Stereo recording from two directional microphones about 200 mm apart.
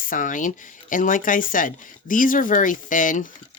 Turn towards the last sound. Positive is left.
turn(degrees=40)  # may be behind; listen again after turning